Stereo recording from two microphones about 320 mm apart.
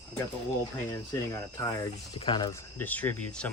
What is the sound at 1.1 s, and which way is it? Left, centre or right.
Speech, centre.